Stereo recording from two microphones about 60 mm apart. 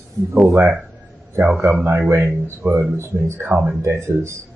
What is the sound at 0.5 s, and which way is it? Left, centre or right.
Speech, right.